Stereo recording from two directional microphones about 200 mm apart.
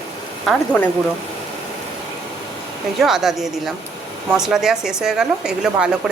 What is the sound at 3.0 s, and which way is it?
A woman's voice, centre (ahead or behind).